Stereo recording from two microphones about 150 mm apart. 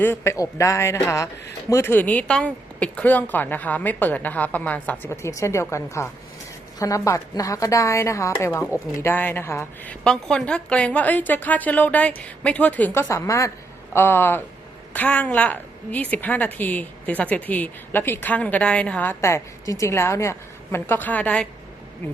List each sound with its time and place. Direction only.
0.0 s a woman's voice: 15° left (ahead or behind)